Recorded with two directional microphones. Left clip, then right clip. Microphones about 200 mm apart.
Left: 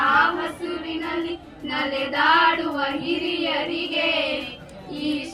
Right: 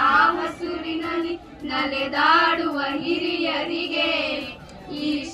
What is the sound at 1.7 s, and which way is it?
Child singing, 30° left (ahead or behind).